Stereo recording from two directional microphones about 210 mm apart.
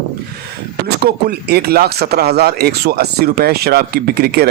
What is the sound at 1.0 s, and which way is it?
Speech, 50° right (ahead or behind).